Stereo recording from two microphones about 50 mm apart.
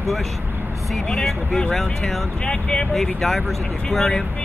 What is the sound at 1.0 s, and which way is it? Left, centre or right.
Speech, centre.